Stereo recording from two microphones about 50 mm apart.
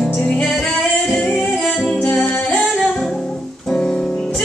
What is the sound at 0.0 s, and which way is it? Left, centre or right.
Music, centre.